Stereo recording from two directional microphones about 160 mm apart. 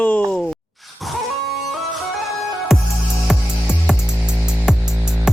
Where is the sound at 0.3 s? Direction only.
5° left (ahead or behind).